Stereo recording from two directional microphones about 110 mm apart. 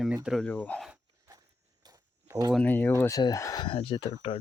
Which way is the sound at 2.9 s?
30° left (ahead or behind).